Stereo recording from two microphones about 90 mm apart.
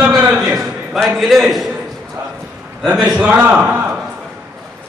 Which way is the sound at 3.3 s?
15° right (ahead or behind).